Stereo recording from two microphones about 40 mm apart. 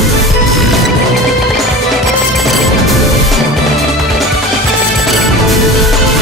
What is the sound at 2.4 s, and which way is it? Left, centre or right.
Music, centre.